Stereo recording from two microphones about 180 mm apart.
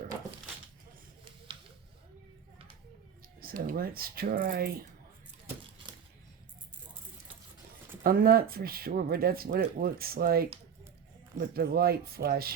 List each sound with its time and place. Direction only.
3.4 s speech: 55° right (ahead or behind)
8.0 s speech: 55° right (ahead or behind)